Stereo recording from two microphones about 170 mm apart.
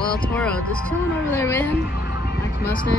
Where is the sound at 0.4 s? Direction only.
5° left (ahead or behind).